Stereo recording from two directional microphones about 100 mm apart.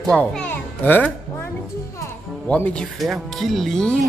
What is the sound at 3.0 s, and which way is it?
Speech, centre (ahead or behind).